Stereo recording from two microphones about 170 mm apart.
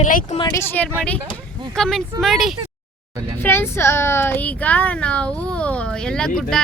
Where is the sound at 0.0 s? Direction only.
50° left (ahead or behind).